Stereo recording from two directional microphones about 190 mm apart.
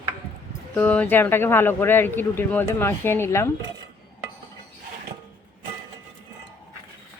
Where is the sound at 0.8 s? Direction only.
10° left (ahead or behind).